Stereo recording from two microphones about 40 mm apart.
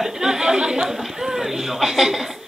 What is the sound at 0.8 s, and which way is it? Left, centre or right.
A man's voice, centre.